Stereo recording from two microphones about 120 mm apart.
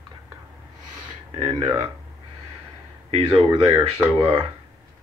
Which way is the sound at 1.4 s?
35° right (ahead or behind).